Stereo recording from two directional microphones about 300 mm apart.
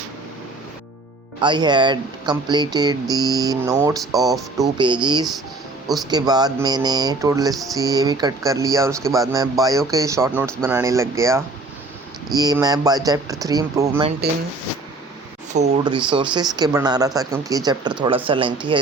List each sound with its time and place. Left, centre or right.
1.4 s speech: centre
6.1 s speech: centre
15.5 s speech: right